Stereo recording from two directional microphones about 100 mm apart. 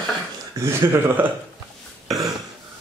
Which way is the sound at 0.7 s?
25° right (ahead or behind).